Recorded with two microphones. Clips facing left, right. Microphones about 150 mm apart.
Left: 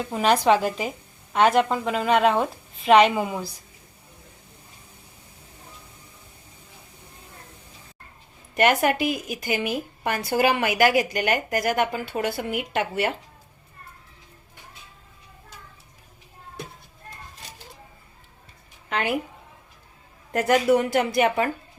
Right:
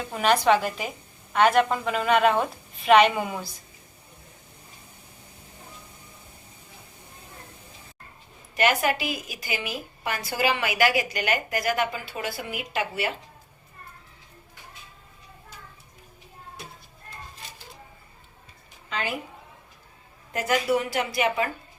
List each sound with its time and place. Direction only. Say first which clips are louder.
0.1 s a woman's voice: left 1 dB; 25° left (ahead or behind)
8.5 s a woman's voice: left 3 dB; 50° left (ahead or behind)
18.9 s a woman's voice: left 5 dB; 60° left (ahead or behind)
20.3 s a woman's voice: left 5 dB; 55° left (ahead or behind)